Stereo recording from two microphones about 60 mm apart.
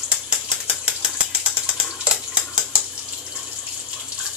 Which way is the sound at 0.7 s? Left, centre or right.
Centre.